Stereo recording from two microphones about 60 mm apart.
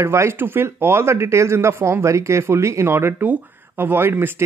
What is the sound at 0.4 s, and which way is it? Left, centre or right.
Speech, right.